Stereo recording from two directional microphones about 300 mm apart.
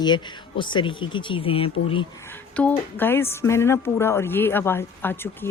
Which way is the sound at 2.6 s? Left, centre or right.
Centre.